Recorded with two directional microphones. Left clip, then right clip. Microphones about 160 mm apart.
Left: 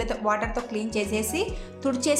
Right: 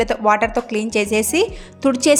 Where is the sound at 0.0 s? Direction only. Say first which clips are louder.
Right 10 dB; 50° right (ahead or behind).